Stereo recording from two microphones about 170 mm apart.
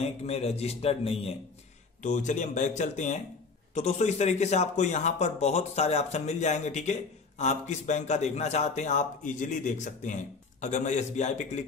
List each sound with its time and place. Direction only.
0.0 s a man's voice: 40° left (ahead or behind)
2.0 s a man's voice: 45° left (ahead or behind)